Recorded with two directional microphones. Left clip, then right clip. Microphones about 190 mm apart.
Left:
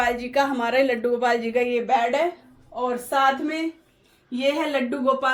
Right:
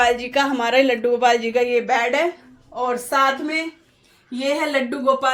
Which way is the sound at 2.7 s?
35° right (ahead or behind).